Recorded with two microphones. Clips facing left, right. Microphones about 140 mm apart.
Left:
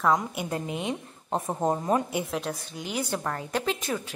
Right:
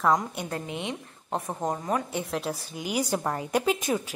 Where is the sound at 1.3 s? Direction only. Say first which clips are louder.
Left 3 dB; 25° left (ahead or behind).